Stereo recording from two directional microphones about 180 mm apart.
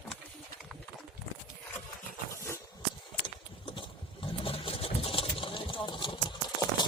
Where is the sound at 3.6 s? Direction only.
30° left (ahead or behind).